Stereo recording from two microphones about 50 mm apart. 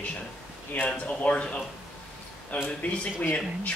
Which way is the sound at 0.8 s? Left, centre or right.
Left.